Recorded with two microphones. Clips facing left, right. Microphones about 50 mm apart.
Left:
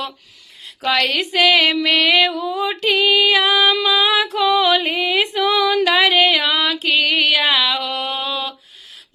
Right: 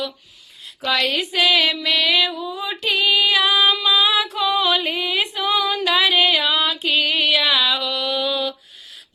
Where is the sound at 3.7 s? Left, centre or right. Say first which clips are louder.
Left 2 dB; left.